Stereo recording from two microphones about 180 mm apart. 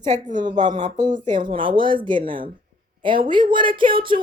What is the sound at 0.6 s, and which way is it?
Speech, 40° right (ahead or behind).